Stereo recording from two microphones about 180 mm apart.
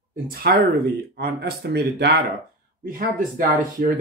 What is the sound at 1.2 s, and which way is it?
Speech, 65° right (ahead or behind).